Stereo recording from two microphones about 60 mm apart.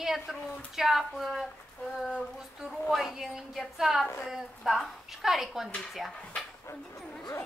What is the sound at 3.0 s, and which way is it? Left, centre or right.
A woman's voice, centre.